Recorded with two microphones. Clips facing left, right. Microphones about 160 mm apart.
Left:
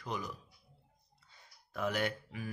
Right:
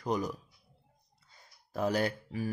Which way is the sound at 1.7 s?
35° right (ahead or behind).